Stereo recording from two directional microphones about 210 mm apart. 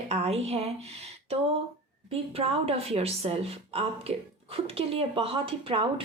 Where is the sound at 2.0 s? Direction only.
30° right (ahead or behind).